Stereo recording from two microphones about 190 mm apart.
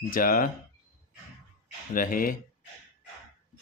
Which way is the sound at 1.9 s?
45° left (ahead or behind).